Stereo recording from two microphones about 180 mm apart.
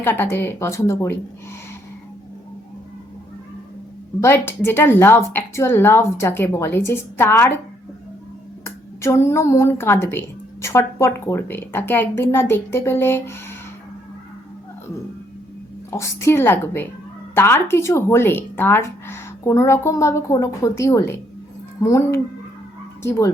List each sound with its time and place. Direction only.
0.0 s a woman's voice: 10° left (ahead or behind)
4.2 s a woman's voice: 10° left (ahead or behind)
8.6 s a woman's voice: 15° left (ahead or behind)
15.9 s a woman's voice: 15° left (ahead or behind)